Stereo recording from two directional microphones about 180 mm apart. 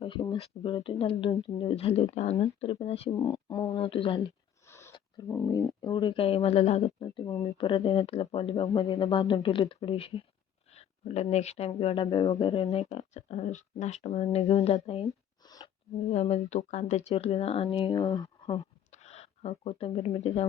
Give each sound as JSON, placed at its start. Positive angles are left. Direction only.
{"t": 0.0, "sound": "speech", "side_deg": 25}
{"t": 3.2, "sound": "speech", "side_deg": 20}
{"t": 4.6, "sound": "a sound", "side_deg": 15}
{"t": 5.5, "sound": "speech", "side_deg": 25}
{"t": 12.6, "sound": "speech", "side_deg": 35}
{"t": 15.4, "sound": "a sound", "side_deg": 20}
{"t": 16.1, "sound": "speech", "side_deg": 40}
{"t": 18.9, "sound": "speech", "side_deg": 35}